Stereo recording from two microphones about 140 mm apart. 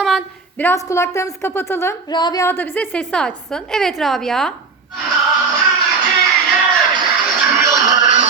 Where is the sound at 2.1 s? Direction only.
30° left (ahead or behind).